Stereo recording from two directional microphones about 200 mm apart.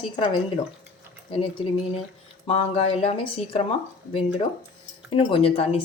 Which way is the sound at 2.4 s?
30° left (ahead or behind).